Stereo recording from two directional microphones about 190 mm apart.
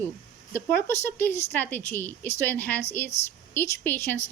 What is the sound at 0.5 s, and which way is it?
A woman's voice, 10° left (ahead or behind).